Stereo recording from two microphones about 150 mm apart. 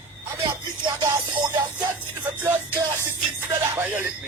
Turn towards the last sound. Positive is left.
turn(degrees=-10)  # may be behind; listen again after turning